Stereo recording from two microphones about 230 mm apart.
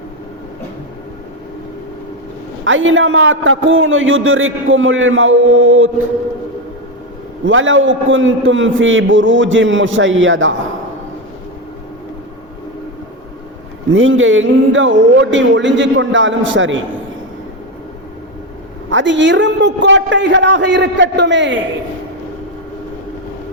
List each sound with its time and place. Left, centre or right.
2.6 s a man's voice: right
7.4 s a man's voice: right
13.9 s speech: right
18.9 s speech: right